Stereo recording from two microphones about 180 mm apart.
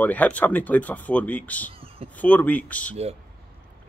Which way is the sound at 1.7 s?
30° right (ahead or behind).